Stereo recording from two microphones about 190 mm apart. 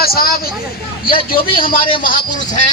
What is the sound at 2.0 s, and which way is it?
Speech, 45° left (ahead or behind).